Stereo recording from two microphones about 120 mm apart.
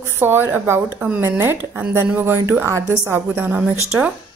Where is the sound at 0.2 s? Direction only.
20° right (ahead or behind).